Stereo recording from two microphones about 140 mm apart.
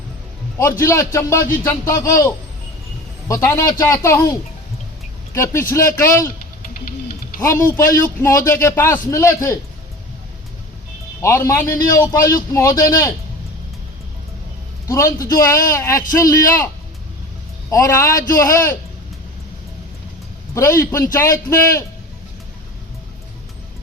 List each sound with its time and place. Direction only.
0.6 s a man's voice: 20° left (ahead or behind)
7.3 s speech: 20° left (ahead or behind)
8.6 s a man's voice: 15° left (ahead or behind)
11.2 s a man's voice: 20° left (ahead or behind)
14.8 s a man's voice: 20° left (ahead or behind)
17.7 s a man's voice: 25° left (ahead or behind)
20.5 s a man's voice: 20° left (ahead or behind)